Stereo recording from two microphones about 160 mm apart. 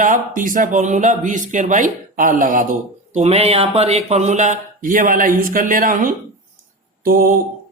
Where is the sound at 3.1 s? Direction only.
40° right (ahead or behind); by 6.1 s 60° right (ahead or behind).